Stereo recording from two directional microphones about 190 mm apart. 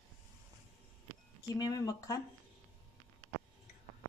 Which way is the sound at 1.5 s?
20° left (ahead or behind).